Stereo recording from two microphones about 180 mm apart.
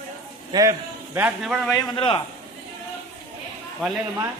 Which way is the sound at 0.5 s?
25° right (ahead or behind).